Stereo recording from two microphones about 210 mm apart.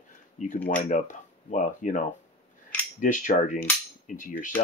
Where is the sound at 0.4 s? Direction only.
35° left (ahead or behind).